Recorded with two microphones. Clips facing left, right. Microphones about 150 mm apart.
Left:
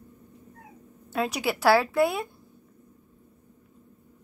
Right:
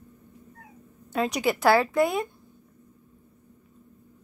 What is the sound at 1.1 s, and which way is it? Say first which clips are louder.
A woman's voice: right 2 dB; 5° left (ahead or behind).